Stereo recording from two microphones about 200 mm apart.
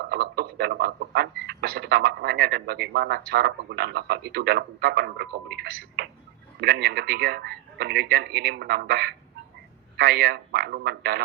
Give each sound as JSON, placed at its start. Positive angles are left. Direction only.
{"t": 0.0, "sound": "a man's voice", "side_deg": -50}